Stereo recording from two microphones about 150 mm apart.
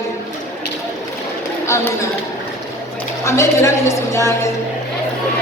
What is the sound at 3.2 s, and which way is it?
A woman's voice, 20° left (ahead or behind).